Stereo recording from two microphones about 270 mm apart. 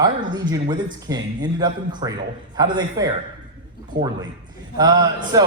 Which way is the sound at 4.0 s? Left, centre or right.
Right.